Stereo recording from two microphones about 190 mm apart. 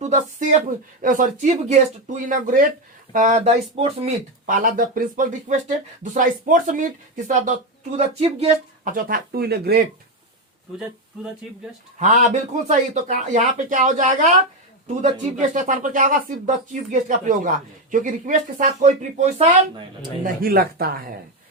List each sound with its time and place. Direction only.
0.0 s speech: 40° right (ahead or behind)
4.5 s speech: 45° right (ahead or behind)
11.9 s speech: 40° right (ahead or behind)
20.2 s speech: 50° right (ahead or behind)